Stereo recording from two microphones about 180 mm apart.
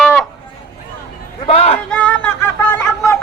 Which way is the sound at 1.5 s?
30° left (ahead or behind).